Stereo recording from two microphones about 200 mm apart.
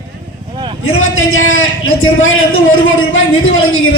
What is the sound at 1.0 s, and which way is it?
A man's voice, 90° left.